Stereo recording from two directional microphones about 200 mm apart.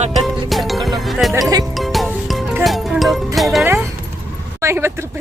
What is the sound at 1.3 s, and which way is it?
Speech, 15° right (ahead or behind).